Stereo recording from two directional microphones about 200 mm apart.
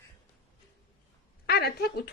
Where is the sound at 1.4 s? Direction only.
55° left (ahead or behind).